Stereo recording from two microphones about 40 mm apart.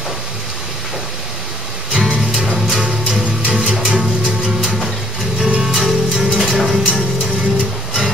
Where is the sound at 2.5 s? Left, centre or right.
Centre.